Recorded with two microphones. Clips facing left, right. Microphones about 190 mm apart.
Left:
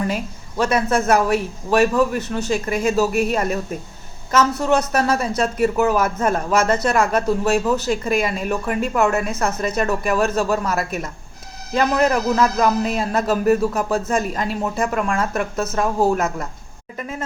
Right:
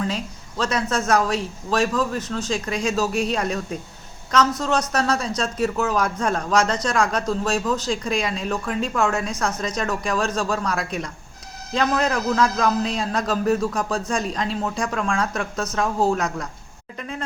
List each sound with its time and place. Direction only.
0.0 s a man's voice: 10° left (ahead or behind)